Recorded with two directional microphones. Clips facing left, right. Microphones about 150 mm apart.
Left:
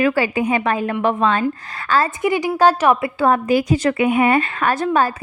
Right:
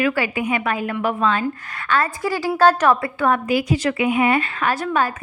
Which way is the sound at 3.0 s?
30° left (ahead or behind).